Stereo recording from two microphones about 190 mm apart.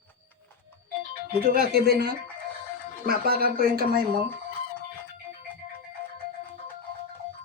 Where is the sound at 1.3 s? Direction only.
55° right (ahead or behind).